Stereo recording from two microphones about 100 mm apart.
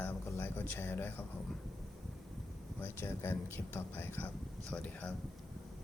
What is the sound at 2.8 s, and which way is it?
Speech, 25° left (ahead or behind).